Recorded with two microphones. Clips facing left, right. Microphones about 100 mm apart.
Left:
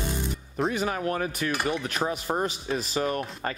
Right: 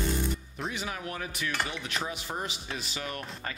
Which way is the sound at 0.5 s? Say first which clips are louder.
Left 9 dB; 40° left (ahead or behind).